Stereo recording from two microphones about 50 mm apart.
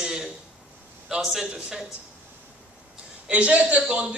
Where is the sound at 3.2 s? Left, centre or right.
Right.